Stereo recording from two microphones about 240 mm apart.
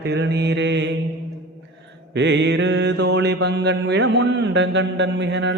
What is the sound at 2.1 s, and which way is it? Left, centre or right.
Speech, right.